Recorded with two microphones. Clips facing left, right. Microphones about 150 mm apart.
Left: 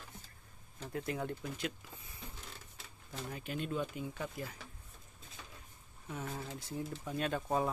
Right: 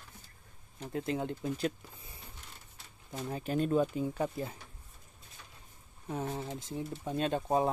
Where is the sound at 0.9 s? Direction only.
25° right (ahead or behind).